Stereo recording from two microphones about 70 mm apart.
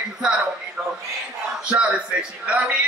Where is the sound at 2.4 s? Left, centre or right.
Centre.